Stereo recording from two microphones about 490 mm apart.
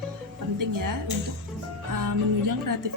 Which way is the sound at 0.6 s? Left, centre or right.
Right.